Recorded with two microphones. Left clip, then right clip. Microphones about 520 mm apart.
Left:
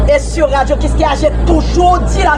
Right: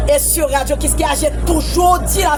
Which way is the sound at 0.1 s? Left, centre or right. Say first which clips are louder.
Left 3 dB; right.